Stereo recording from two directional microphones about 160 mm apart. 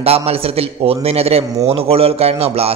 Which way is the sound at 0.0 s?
40° right (ahead or behind).